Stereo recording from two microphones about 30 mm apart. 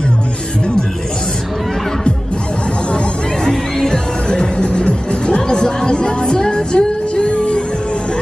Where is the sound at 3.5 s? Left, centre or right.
Left.